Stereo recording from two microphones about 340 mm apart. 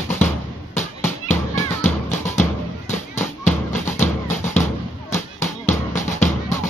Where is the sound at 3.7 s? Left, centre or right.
Left.